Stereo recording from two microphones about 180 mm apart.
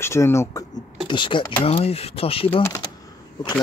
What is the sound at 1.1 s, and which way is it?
Speech, 25° left (ahead or behind).